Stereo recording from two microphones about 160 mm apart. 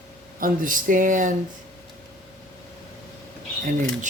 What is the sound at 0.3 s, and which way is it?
Speech, 60° right (ahead or behind).